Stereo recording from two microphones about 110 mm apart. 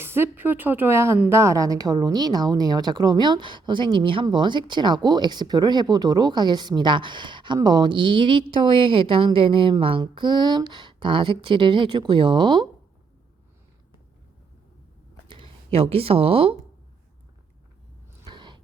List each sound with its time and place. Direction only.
0.0 s a woman's voice: 20° right (ahead or behind); by 12.6 s 45° right (ahead or behind)
15.3 s speech: 55° right (ahead or behind)
18.3 s a sound: 45° right (ahead or behind)